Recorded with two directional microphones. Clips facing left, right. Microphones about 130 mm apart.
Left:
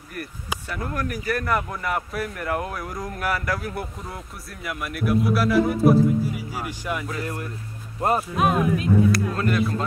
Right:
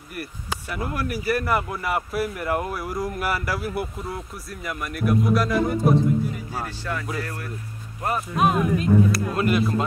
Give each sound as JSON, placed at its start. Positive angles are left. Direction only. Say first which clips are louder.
{"t": 0.7, "sound": "speech", "louder": "right 1 dB", "side_deg": -10}
{"t": 6.5, "sound": "speech", "louder": "left 1 dB", "side_deg": 15}
{"t": 8.0, "sound": "speech", "louder": "left 4 dB", "side_deg": 30}
{"t": 8.4, "sound": "speech", "louder": "right 5 dB", "side_deg": 0}